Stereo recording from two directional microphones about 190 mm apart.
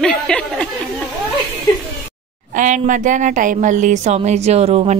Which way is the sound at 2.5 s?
40° right (ahead or behind).